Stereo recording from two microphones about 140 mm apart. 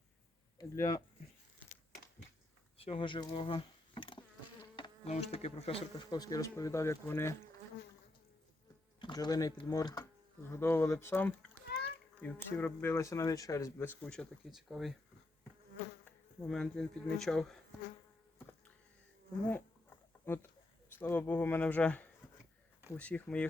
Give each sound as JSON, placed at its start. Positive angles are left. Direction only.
{"t": 0.6, "sound": "speech", "side_deg": 25}
{"t": 2.7, "sound": "speech", "side_deg": 40}
{"t": 5.0, "sound": "speech", "side_deg": 50}
{"t": 9.0, "sound": "speech", "side_deg": 35}
{"t": 16.5, "sound": "speech", "side_deg": 5}
{"t": 20.2, "sound": "speech", "side_deg": 15}